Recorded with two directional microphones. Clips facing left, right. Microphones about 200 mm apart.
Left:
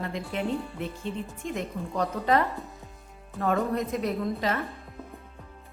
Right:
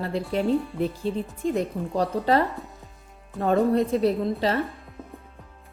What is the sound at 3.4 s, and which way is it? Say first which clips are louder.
A woman's voice: right 6 dB; 30° right (ahead or behind).